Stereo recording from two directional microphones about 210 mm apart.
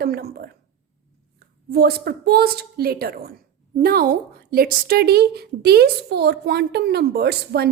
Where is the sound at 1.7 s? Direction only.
50° right (ahead or behind).